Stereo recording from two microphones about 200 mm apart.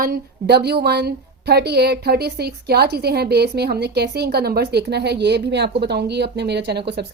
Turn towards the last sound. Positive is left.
turn(degrees=-55)  # may be behind; listen again after turning